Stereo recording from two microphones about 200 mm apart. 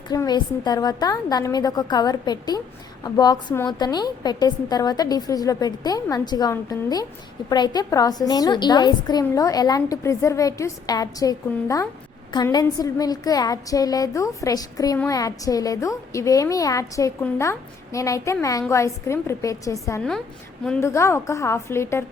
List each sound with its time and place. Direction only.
0.1 s a woman's voice: 20° left (ahead or behind)